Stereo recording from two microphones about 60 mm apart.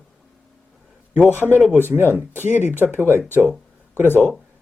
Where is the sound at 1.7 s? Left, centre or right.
Right.